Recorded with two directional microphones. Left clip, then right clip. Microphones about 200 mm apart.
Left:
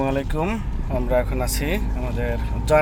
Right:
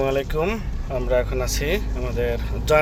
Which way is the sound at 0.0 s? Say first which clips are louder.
Right 2 dB; 5° left (ahead or behind).